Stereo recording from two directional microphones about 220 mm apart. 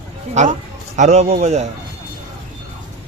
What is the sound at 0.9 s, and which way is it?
Speech, 30° right (ahead or behind).